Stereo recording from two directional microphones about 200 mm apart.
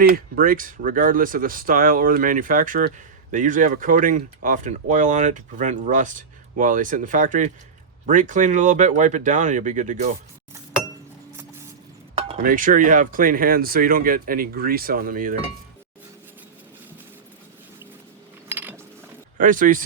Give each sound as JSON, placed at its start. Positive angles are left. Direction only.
{"t": 0.0, "sound": "speech", "side_deg": -45}
{"t": 12.4, "sound": "speech", "side_deg": -45}
{"t": 18.4, "sound": "a sound", "side_deg": -10}
{"t": 19.4, "sound": "speech", "side_deg": -40}